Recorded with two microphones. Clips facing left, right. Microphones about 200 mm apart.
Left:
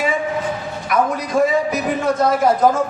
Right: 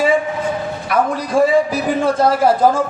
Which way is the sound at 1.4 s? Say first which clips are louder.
Right 3 dB; 30° right (ahead or behind).